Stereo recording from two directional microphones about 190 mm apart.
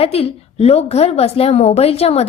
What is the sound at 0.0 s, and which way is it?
A woman's voice, 30° left (ahead or behind).